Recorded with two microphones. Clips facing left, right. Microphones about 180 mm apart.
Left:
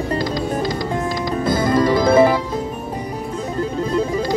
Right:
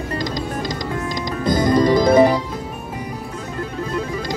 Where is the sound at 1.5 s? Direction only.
25° left (ahead or behind).